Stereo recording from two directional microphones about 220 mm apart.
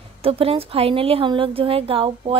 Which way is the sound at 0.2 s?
25° right (ahead or behind).